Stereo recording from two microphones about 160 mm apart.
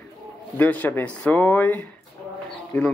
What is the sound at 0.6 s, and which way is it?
Speech, 10° left (ahead or behind).